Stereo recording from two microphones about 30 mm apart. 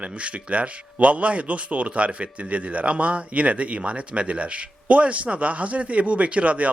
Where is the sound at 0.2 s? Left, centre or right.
Right.